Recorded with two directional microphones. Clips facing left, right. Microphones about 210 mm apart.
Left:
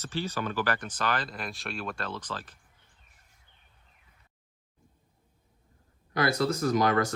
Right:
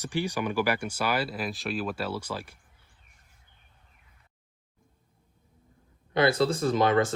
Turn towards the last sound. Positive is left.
turn(degrees=-25)  # may be behind; listen again after turning